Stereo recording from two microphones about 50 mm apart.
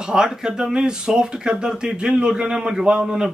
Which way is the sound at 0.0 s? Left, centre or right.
Centre.